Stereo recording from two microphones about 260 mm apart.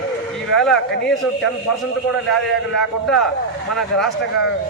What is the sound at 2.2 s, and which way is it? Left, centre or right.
A man's voice, centre.